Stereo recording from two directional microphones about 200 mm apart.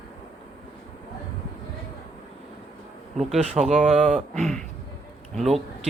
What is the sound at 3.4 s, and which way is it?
Speech, 35° right (ahead or behind).